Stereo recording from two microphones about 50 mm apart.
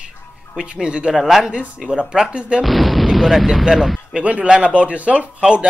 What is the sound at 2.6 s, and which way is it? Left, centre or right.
Speech, centre.